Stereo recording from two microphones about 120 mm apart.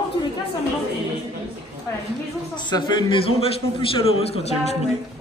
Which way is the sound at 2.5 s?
40° left (ahead or behind).